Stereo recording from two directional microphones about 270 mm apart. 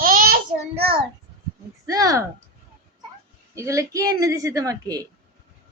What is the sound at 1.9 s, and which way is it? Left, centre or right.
Speech, centre.